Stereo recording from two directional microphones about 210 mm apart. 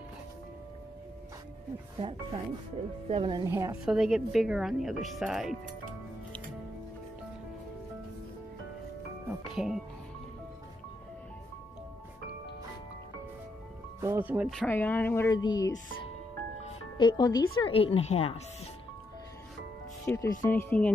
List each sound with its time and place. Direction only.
2.0 s a woman's voice: 25° right (ahead or behind); by 5.6 s centre (ahead or behind)
9.3 s music: 5° right (ahead or behind)
14.0 s speech: 10° right (ahead or behind)
14.7 s speech: 10° left (ahead or behind)
16.6 s music: 20° left (ahead or behind)
17.6 s speech: 25° left (ahead or behind)
20.1 s speech: 15° left (ahead or behind)